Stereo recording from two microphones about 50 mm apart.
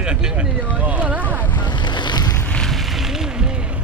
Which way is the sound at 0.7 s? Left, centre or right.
Right.